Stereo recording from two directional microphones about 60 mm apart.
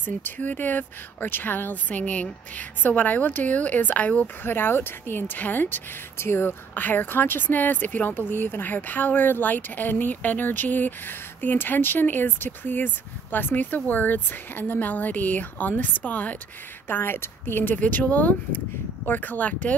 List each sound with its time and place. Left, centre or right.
0.0 s speech: left
4.4 s speech: left
6.1 s speech: left
16.8 s speech: left